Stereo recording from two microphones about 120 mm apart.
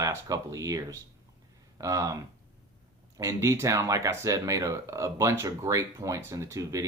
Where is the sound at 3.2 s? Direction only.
25° right (ahead or behind).